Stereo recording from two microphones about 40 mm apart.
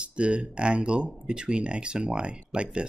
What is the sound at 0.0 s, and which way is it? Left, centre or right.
Speech, right.